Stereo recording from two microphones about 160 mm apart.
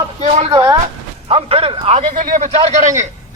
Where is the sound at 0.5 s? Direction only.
25° right (ahead or behind).